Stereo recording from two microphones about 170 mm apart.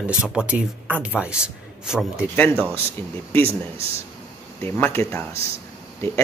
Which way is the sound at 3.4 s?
35° right (ahead or behind).